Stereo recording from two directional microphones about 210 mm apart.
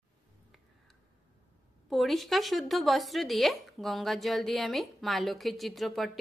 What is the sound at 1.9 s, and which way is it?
Speech, centre (ahead or behind).